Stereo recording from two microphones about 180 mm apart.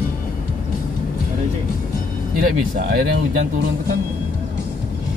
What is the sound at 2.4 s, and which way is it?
Speech, 55° right (ahead or behind).